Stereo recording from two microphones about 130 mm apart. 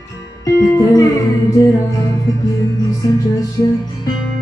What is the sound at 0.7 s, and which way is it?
Music, 25° left (ahead or behind).